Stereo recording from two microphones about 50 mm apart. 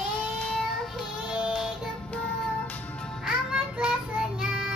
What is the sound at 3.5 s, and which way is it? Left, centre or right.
Child singing, centre.